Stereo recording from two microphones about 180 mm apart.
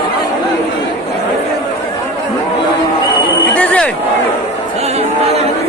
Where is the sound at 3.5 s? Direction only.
5° left (ahead or behind).